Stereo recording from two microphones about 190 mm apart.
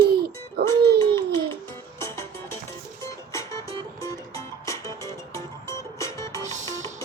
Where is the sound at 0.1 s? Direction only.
55° right (ahead or behind).